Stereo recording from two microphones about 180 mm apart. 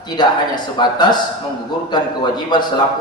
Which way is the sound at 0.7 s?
25° left (ahead or behind).